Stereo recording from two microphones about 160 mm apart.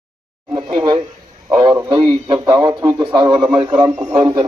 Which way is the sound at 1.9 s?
25° right (ahead or behind).